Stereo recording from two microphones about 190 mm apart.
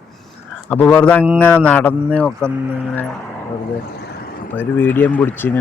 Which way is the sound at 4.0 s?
55° left (ahead or behind).